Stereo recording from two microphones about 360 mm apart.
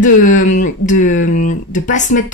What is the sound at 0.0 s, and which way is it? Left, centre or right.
Speech, left.